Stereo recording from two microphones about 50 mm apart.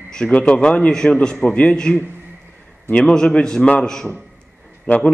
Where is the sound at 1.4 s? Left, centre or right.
Left.